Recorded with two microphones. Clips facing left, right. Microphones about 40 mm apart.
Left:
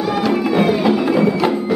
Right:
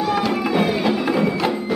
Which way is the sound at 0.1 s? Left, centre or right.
Centre.